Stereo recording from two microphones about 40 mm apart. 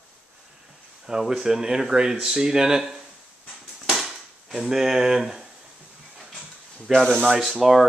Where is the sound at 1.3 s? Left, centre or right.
Centre.